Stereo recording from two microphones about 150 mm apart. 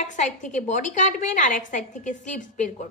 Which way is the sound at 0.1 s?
55° left (ahead or behind).